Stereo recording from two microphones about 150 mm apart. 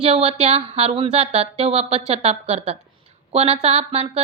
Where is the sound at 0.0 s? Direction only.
40° right (ahead or behind).